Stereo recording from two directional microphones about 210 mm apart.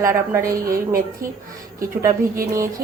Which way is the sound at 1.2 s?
40° right (ahead or behind).